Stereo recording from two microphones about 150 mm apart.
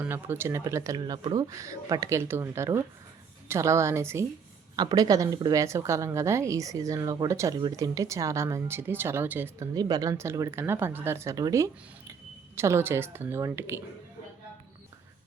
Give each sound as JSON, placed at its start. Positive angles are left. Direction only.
{"t": 0.0, "sound": "a woman's voice", "side_deg": -15}